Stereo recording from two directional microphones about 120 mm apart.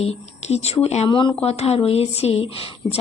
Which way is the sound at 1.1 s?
40° left (ahead or behind).